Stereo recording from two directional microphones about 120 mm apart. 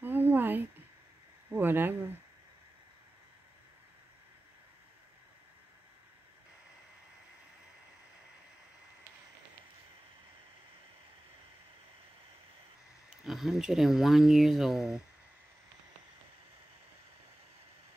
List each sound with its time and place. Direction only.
0.0 s a sound: 15° right (ahead or behind)
1.5 s speech: 15° right (ahead or behind)
13.2 s speech: centre (ahead or behind)